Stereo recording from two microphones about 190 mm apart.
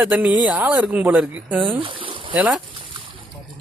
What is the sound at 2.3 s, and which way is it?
Speech, 5° right (ahead or behind).